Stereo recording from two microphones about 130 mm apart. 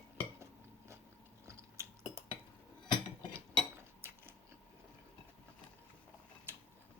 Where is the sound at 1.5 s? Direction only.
20° right (ahead or behind).